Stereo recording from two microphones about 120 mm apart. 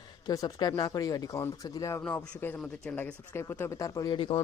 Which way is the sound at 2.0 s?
10° left (ahead or behind).